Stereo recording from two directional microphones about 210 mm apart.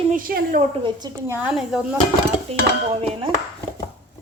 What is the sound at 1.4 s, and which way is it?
Speech, centre (ahead or behind).